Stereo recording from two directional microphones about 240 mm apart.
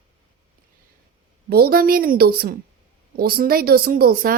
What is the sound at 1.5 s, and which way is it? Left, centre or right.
A woman's voice, right.